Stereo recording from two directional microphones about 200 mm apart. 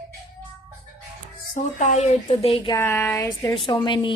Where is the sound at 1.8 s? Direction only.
35° left (ahead or behind).